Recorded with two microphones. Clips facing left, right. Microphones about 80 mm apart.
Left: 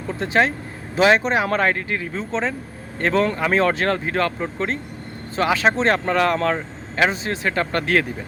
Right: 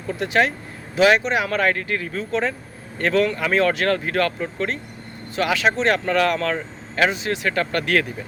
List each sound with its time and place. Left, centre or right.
0.2 s speech: left